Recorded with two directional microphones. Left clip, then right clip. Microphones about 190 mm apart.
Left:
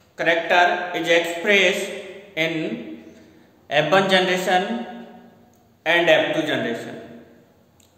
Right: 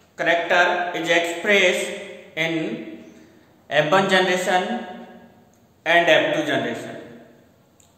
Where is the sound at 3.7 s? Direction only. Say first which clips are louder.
Even; 15° left (ahead or behind).